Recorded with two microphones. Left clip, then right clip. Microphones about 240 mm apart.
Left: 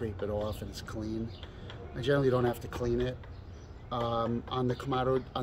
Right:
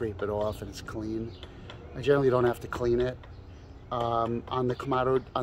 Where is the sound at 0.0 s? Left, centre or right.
Centre.